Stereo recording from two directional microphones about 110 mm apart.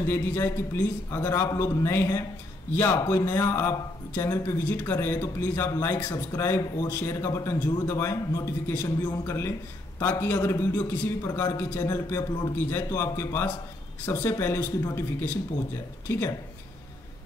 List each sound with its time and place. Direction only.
0.1 s a man's voice: 20° left (ahead or behind)